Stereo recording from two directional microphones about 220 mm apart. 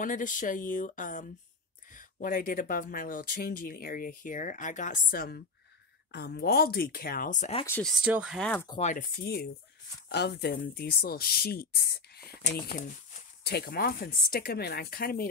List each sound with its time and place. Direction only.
0.0 s speech: 35° left (ahead or behind)
7.6 s speech: 10° left (ahead or behind)
7.9 s speech: 5° right (ahead or behind)
8.6 s speech: 25° left (ahead or behind)
8.9 s speech: 45° left (ahead or behind)